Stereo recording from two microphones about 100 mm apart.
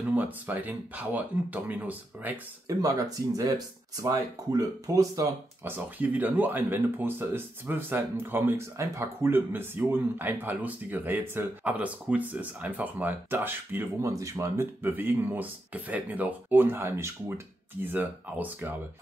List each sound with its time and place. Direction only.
0.1 s speech: 15° right (ahead or behind)
2.7 s speech: 35° right (ahead or behind)
5.6 s speech: 20° right (ahead or behind)
14.1 s speech: 30° right (ahead or behind)